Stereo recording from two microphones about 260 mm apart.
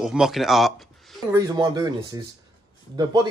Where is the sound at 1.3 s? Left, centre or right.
Centre.